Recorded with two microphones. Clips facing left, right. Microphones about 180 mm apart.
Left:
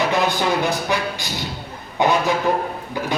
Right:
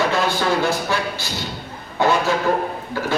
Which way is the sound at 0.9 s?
15° left (ahead or behind).